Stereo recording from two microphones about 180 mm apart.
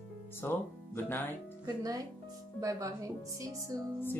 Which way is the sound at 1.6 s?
20° right (ahead or behind).